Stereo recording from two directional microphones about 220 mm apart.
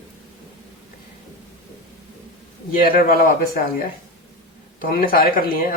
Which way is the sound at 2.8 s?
40° left (ahead or behind).